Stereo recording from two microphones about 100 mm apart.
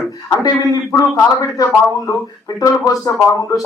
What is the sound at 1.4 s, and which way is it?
Speech, 35° left (ahead or behind).